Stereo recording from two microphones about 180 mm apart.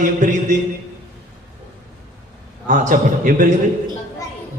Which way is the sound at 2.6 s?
45° right (ahead or behind).